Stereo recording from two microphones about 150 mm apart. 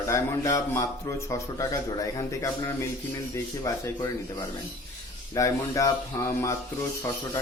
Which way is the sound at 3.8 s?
25° left (ahead or behind).